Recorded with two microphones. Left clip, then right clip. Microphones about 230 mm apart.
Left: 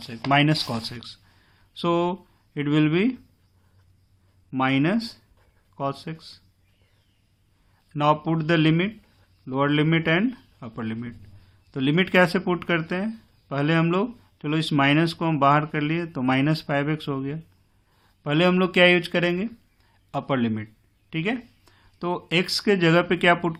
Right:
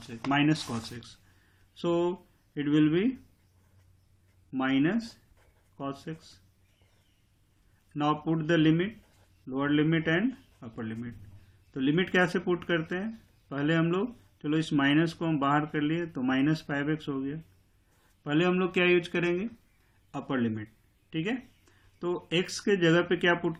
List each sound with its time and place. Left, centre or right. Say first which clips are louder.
0.3 s speech: left 6 dB; left
4.5 s speech: left 5 dB; left
7.9 s speech: left 7 dB; left